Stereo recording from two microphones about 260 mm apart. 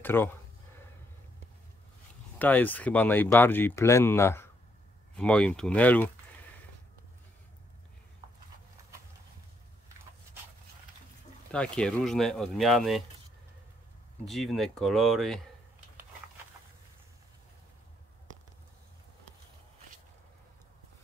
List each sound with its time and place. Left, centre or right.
0.0 s speech: centre
2.3 s speech: centre
11.5 s speech: centre
14.2 s speech: centre